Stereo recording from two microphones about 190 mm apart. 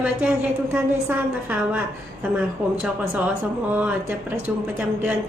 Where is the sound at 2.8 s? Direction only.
5° right (ahead or behind).